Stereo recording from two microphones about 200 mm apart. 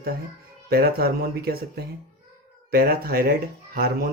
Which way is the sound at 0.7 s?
50° right (ahead or behind).